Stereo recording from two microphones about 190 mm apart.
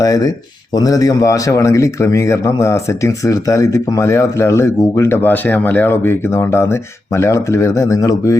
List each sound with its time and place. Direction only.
0.0 s speech: 20° left (ahead or behind)